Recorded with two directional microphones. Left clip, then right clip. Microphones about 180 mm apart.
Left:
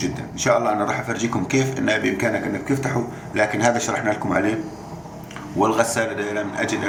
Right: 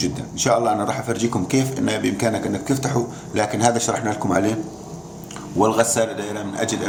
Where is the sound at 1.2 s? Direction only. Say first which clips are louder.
Even; 85° right.